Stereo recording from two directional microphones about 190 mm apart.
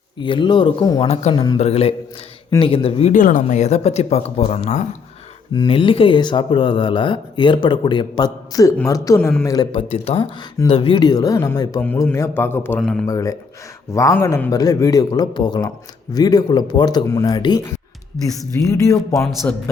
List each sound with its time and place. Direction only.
0.2 s speech: 25° left (ahead or behind)
1.0 s speech: 35° left (ahead or behind); by 11.8 s 20° left (ahead or behind)
11.8 s a man's voice: 10° left (ahead or behind)
13.1 s a man's voice: 15° left (ahead or behind)